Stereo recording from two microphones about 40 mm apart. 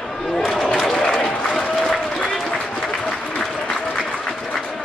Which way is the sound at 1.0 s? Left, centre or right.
Centre.